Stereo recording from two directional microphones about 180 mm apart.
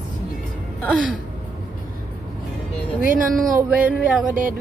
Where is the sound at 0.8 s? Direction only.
5° left (ahead or behind).